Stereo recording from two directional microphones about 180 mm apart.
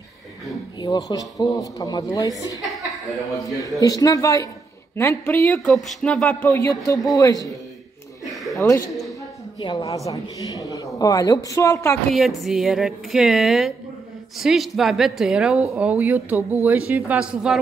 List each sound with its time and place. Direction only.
0.7 s speech: 20° left (ahead or behind)
2.8 s chuckle: centre (ahead or behind)
3.3 s a woman's voice: 20° left (ahead or behind); by 6.5 s 5° left (ahead or behind)
6.5 s speech: 20° left (ahead or behind)
8.5 s speech: 20° left (ahead or behind)
12.1 s a woman's voice: centre (ahead or behind)